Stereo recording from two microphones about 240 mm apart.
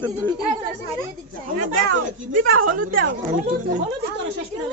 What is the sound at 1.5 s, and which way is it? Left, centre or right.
A woman's voice, right.